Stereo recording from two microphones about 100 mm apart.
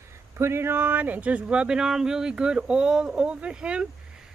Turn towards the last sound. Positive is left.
turn(degrees=-10)  # may be behind; listen again after turning